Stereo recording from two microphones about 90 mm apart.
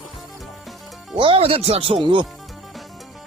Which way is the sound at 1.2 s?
85° right.